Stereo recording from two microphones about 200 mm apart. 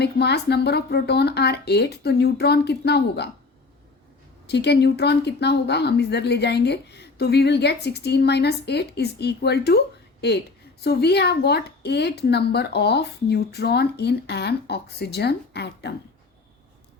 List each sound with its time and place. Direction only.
0.0 s a woman's voice: 55° left (ahead or behind)
4.4 s a woman's voice: 55° left (ahead or behind)